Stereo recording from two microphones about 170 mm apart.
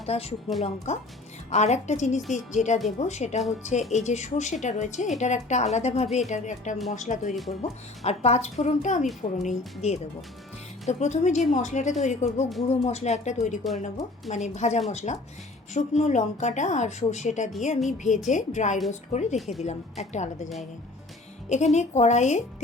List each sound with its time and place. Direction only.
0.0 s a woman's voice: 35° left (ahead or behind)
19.4 s speech: centre (ahead or behind)
19.6 s a woman's voice: 40° left (ahead or behind)
21.5 s a woman's voice: 40° left (ahead or behind)